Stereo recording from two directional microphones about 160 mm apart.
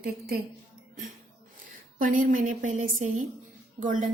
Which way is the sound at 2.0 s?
55° right (ahead or behind).